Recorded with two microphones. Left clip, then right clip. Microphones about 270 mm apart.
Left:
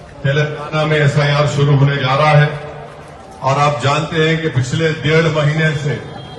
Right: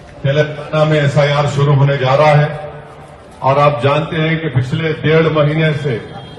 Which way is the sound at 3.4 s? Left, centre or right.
Right.